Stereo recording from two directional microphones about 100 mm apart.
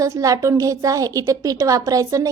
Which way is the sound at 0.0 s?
35° right (ahead or behind).